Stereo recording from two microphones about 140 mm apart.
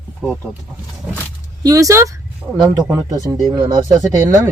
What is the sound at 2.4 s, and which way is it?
Speech, 5° right (ahead or behind).